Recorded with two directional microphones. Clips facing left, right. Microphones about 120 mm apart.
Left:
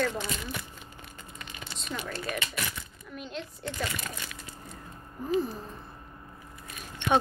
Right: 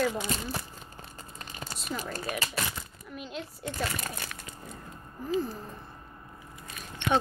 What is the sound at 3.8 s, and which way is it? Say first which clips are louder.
Speech: right 1 dB; 50° right (ahead or behind).